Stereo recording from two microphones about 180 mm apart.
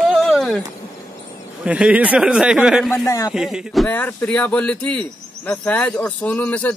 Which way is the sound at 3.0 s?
15° left (ahead or behind).